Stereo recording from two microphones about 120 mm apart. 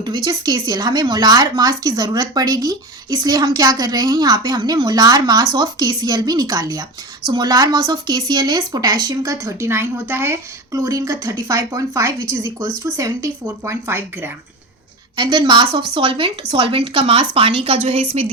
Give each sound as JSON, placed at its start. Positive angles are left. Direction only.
{"t": 0.0, "sound": "a woman's voice", "side_deg": -35}
{"t": 15.1, "sound": "speech", "side_deg": -40}